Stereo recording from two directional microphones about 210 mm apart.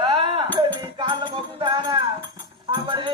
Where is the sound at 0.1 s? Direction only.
25° right (ahead or behind).